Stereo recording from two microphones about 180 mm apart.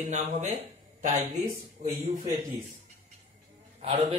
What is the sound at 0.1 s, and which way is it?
A man's voice, 40° right (ahead or behind).